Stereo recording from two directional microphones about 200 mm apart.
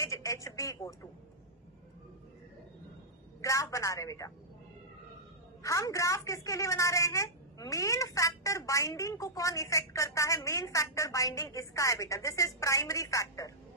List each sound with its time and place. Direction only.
0.0 s a sound: 15° left (ahead or behind)
3.4 s speech: 15° left (ahead or behind)
5.6 s a woman's voice: 15° left (ahead or behind)